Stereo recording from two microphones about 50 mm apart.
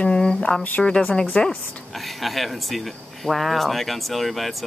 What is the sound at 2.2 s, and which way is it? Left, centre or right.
Speech, centre.